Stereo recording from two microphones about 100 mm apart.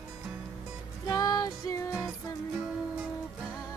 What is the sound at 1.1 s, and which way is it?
Music, 35° left (ahead or behind).